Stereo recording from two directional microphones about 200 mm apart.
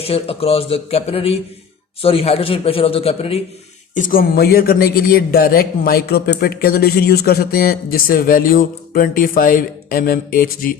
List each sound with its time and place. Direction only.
0.0 s a man's voice: 30° left (ahead or behind)
3.9 s speech: 45° left (ahead or behind)